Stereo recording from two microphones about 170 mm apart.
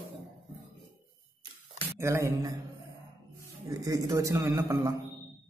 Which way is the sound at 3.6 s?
20° right (ahead or behind).